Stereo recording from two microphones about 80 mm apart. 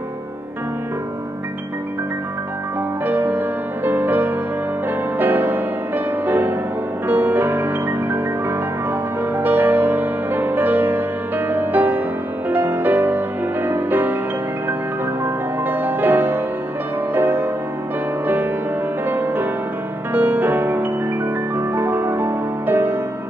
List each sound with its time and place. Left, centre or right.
3.1 s music: right
15.2 s music: right